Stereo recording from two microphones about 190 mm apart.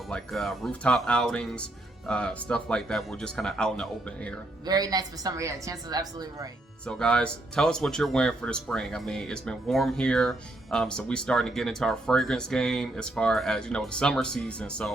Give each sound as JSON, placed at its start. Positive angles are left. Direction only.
{"t": 0.1, "sound": "speech", "side_deg": 0}
{"t": 4.6, "sound": "a woman's voice", "side_deg": -20}
{"t": 6.8, "sound": "speech", "side_deg": 5}